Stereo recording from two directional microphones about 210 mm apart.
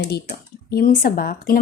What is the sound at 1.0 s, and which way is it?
Speech, 45° left (ahead or behind).